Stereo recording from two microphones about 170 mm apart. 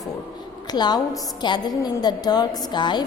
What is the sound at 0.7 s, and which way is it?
A woman's voice, 25° left (ahead or behind).